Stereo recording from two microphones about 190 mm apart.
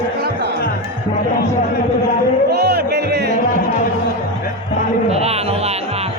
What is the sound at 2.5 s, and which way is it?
Music, 60° right (ahead or behind).